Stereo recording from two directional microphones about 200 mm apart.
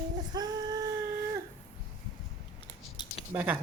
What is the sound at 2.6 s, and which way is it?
Scissors, 25° left (ahead or behind).